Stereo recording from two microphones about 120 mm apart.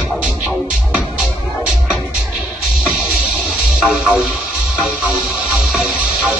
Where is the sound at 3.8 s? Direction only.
5° right (ahead or behind).